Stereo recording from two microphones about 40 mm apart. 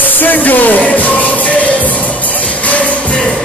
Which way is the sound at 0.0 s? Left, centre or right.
Left.